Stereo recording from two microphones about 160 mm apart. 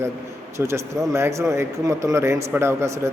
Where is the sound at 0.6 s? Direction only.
15° right (ahead or behind).